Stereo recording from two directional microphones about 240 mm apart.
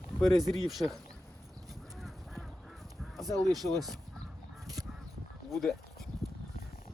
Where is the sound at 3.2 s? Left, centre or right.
Centre.